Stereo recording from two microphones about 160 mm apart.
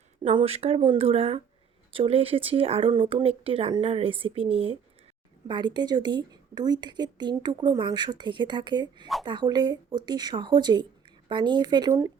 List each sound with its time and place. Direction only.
0.2 s a woman's voice: 35° right (ahead or behind)